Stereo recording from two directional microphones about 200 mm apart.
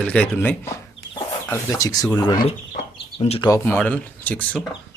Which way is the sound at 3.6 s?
10° left (ahead or behind).